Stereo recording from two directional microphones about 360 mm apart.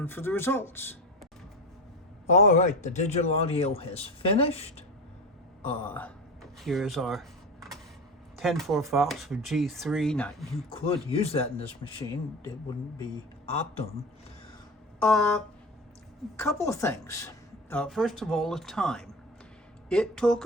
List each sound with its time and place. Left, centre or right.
0.0 s speech: centre
2.2 s a man's voice: centre
10.7 s a man's voice: centre
13.4 s a man's voice: centre
15.0 s speech: centre
16.4 s speech: centre